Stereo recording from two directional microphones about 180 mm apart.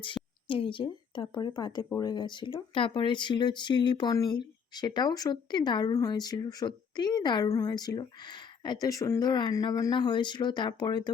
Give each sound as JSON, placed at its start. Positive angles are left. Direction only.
{"t": 0.0, "sound": "speech", "side_deg": 30}